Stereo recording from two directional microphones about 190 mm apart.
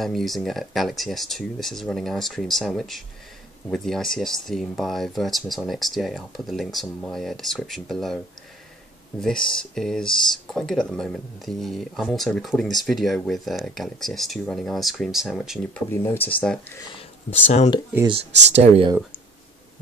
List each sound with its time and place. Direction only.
0.0 s speech: centre (ahead or behind)
9.2 s speech: 5° left (ahead or behind)
15.9 s speech: 10° left (ahead or behind)
18.5 s speech: 35° right (ahead or behind)